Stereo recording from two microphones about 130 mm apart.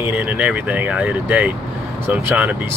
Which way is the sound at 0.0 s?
10° right (ahead or behind).